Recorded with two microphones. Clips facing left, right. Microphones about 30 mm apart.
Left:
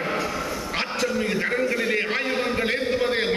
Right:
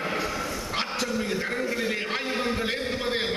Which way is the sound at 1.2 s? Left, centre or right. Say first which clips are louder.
Left 5 dB; centre.